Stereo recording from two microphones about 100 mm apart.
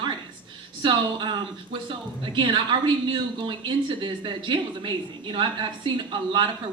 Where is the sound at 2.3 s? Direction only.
55° right (ahead or behind).